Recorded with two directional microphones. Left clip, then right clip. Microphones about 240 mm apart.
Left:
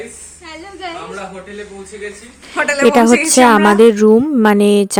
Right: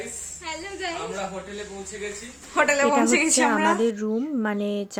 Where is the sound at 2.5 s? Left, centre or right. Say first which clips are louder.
Left 8 dB; centre.